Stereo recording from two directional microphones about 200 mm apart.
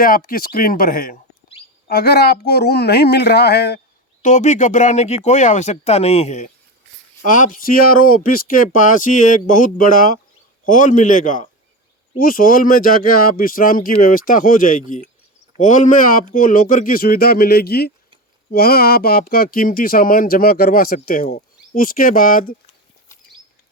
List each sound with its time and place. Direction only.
0.0 s speech: 45° left (ahead or behind)
4.2 s speech: 35° left (ahead or behind)